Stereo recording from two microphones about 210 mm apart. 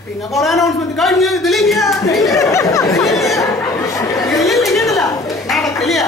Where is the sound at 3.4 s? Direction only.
15° left (ahead or behind).